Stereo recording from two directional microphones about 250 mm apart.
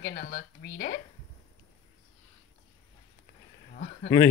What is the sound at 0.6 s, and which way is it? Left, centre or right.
Speech, left.